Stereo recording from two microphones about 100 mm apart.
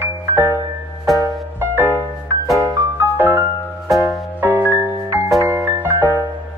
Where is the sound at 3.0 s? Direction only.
20° right (ahead or behind).